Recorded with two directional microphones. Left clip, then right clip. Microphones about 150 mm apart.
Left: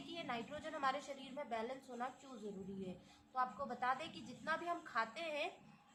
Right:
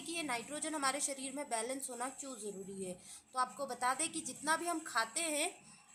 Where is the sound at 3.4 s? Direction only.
55° right (ahead or behind).